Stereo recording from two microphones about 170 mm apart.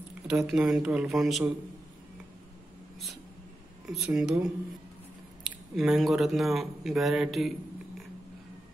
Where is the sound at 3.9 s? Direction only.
Centre (ahead or behind).